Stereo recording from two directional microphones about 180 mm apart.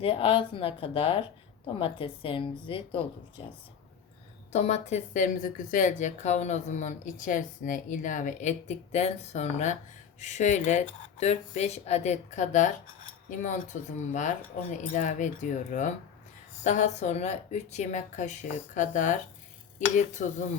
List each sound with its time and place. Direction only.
0.0 s a woman's voice: 30° left (ahead or behind)
4.5 s speech: 35° left (ahead or behind)